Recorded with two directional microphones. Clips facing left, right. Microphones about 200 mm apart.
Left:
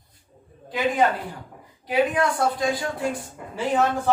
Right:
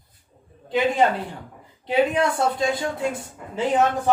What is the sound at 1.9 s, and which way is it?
A woman's voice, 25° right (ahead or behind).